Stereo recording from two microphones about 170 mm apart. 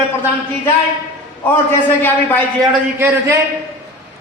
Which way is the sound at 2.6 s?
15° right (ahead or behind).